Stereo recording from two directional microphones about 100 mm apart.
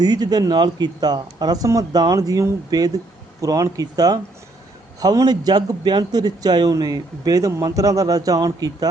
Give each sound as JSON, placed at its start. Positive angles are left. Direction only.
{"t": 0.0, "sound": "a man's voice", "side_deg": -40}